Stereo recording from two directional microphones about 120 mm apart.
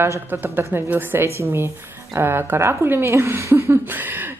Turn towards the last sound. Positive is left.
turn(degrees=-15)  # may be behind; listen again after turning